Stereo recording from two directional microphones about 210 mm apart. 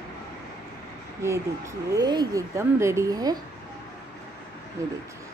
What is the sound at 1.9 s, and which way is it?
Speech, 20° right (ahead or behind).